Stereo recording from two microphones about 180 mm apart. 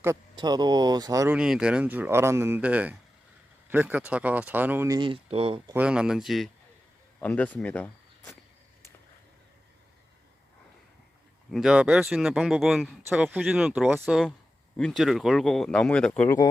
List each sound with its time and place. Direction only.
0.0 s speech: 20° right (ahead or behind)
1.4 s speech: 5° right (ahead or behind)
4.9 s speech: 25° right (ahead or behind)
5.7 s speech: 5° right (ahead or behind); by 8.4 s 10° left (ahead or behind)
11.5 s speech: 5° right (ahead or behind)